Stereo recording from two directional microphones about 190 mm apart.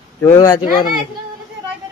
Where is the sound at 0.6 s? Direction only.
50° left (ahead or behind).